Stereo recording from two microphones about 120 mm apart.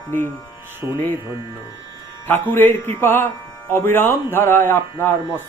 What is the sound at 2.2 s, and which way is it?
Speech, 15° left (ahead or behind).